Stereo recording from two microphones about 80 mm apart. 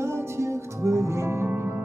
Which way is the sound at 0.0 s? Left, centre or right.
Right.